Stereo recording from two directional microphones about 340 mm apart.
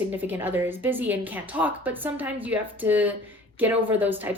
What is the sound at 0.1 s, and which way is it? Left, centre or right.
Speech, centre.